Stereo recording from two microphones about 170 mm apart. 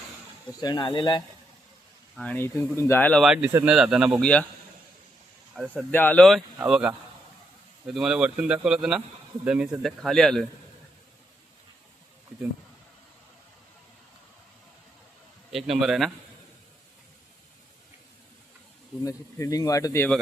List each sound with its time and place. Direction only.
0.6 s speech: 25° left (ahead or behind)
2.1 s speech: 10° left (ahead or behind)
3.2 s speech: 5° right (ahead or behind)
4.2 s speech: 5° left (ahead or behind)
5.7 s speech: 10° left (ahead or behind)
7.9 s speech: 5° right (ahead or behind)
15.4 s speech: centre (ahead or behind)
19.0 s speech: 20° left (ahead or behind)